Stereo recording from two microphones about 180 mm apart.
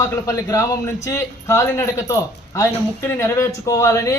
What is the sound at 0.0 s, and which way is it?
A man's voice, 20° left (ahead or behind).